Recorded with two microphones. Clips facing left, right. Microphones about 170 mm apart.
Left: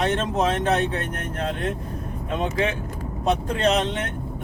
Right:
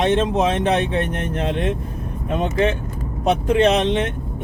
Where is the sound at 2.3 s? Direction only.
55° right (ahead or behind).